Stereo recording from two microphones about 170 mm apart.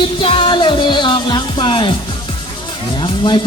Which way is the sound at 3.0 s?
30° left (ahead or behind).